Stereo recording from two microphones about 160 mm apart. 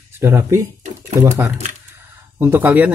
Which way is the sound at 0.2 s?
15° right (ahead or behind).